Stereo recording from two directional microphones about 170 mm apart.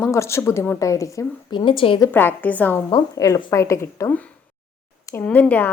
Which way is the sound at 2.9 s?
25° left (ahead or behind).